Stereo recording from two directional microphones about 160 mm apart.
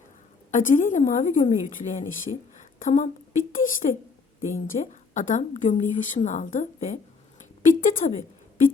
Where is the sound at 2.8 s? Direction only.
50° left (ahead or behind).